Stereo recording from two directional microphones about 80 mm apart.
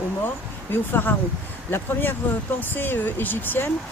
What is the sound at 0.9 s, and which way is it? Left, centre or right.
Speech, left.